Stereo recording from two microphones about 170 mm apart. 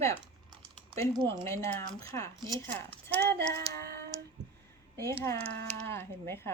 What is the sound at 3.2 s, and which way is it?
Child singing, 75° right (ahead or behind).